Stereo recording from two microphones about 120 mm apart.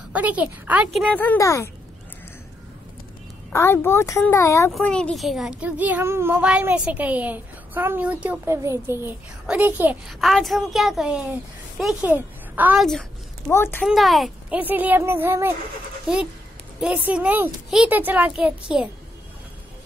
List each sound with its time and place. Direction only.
0.1 s a child's voice: 10° right (ahead or behind)
1.1 s speech: 15° left (ahead or behind)
1.4 s speech: 25° left (ahead or behind)
3.5 s speech: 20° left (ahead or behind)
4.7 s a child's voice: 10° left (ahead or behind); by 9.9 s 15° right (ahead or behind)
10.0 s a woman's voice: centre (ahead or behind)
13.5 s speech: 20° left (ahead or behind)
13.8 s a woman's voice: centre (ahead or behind)
14.5 s a child's voice: 15° right (ahead or behind)
16.8 s a child's voice: 10° right (ahead or behind)